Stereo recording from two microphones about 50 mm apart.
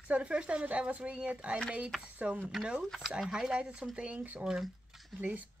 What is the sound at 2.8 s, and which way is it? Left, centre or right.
Speech, centre.